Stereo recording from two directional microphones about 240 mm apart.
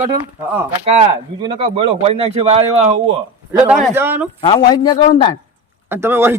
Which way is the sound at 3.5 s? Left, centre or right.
Centre.